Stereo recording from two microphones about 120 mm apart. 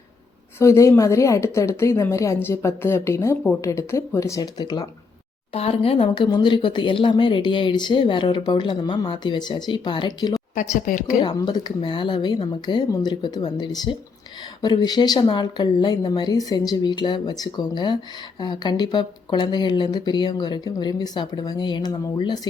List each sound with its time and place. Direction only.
0.6 s a woman's voice: 25° left (ahead or behind)
5.5 s speech: 55° left (ahead or behind)
6.1 s speech: 35° left (ahead or behind)
10.5 s speech: 90° left
11.2 s speech: 40° left (ahead or behind)